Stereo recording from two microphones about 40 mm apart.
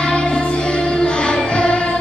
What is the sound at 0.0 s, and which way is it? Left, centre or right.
Music, left.